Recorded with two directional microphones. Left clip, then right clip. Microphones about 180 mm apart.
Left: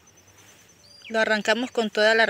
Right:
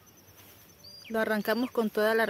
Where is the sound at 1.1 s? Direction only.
10° right (ahead or behind).